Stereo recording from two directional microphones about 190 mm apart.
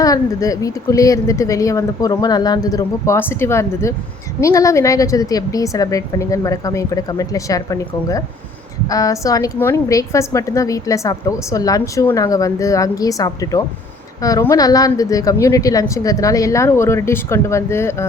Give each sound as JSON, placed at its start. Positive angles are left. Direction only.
{"t": 0.0, "sound": "a woman's voice", "side_deg": 20}